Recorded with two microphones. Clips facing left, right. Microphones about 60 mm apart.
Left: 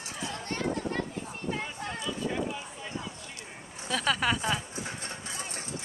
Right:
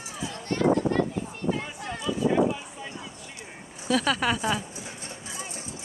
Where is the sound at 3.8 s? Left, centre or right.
Centre.